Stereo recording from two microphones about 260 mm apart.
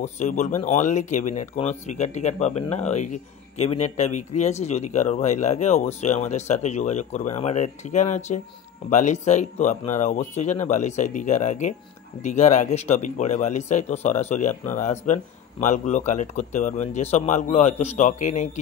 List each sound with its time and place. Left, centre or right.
0.0 s speech: left